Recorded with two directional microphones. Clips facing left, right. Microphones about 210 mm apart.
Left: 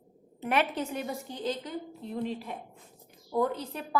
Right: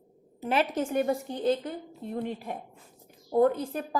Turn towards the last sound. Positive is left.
turn(degrees=-50)  # may be behind; listen again after turning